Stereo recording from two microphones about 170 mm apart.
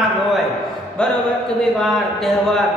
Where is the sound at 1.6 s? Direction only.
Centre (ahead or behind).